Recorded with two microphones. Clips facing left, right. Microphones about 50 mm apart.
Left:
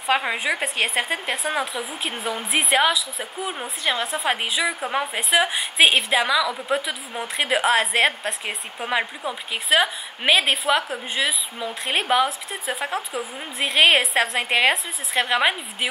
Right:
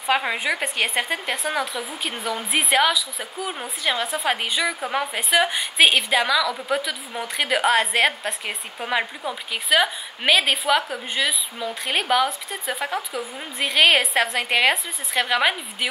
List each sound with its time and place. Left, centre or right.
0.0 s a woman's voice: centre
6.2 s a woman's voice: centre
12.3 s a woman's voice: centre
14.4 s a woman's voice: centre